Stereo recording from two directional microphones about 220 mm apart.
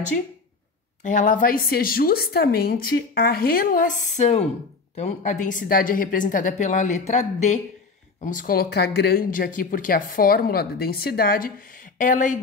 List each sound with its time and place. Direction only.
1.0 s speech: 35° left (ahead or behind)